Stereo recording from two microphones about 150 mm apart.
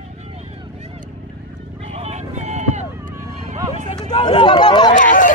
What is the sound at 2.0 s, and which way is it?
Run, 50° right (ahead or behind).